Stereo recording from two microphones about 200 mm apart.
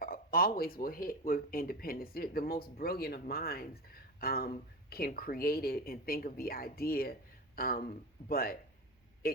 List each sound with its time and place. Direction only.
0.0 s speech: 45° left (ahead or behind)
9.2 s vehicle: 50° left (ahead or behind)